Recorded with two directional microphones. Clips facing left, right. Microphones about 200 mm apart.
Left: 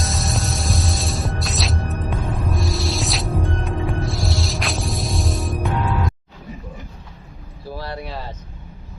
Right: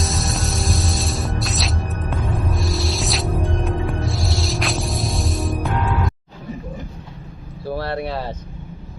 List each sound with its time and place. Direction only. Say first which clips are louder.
0.0 s music: right 1 dB; centre (ahead or behind)
7.7 s vehicle: right 6 dB; 65° right (ahead or behind)